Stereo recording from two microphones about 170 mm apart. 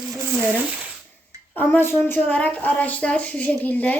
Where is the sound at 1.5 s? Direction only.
10° left (ahead or behind).